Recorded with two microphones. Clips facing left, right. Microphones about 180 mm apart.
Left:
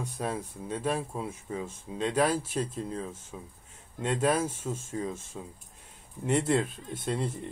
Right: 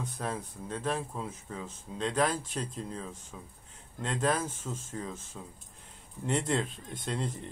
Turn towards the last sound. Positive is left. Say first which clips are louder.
# left 3 dB
turn(degrees=5)  # may be behind; listen again after turning